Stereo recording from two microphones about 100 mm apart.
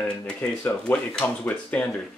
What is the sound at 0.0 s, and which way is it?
Speech, 15° left (ahead or behind).